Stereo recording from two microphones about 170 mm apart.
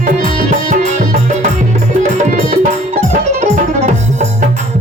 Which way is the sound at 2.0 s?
45° right (ahead or behind).